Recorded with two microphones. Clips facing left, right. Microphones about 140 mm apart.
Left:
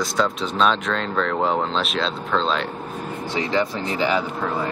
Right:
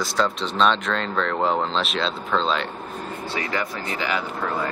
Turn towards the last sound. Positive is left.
turn(degrees=25)  # may be behind; listen again after turning